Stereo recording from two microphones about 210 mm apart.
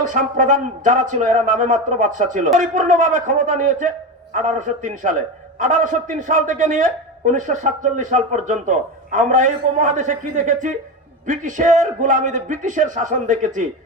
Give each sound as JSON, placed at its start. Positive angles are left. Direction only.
{"t": 0.0, "sound": "a man's voice", "side_deg": -40}